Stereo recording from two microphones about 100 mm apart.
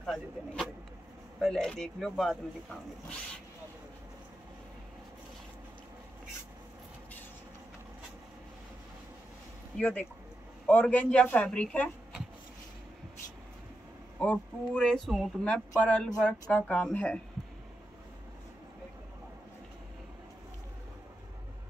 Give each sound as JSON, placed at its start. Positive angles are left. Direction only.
{"t": 0.0, "sound": "vehicle", "side_deg": 0}
{"t": 1.4, "sound": "speech", "side_deg": 5}
{"t": 9.8, "sound": "a man's voice", "side_deg": 15}
{"t": 14.2, "sound": "a man's voice", "side_deg": 10}
{"t": 15.4, "sound": "a man's voice", "side_deg": 10}